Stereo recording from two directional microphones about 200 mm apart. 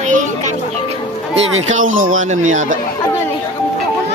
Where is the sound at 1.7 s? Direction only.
40° right (ahead or behind).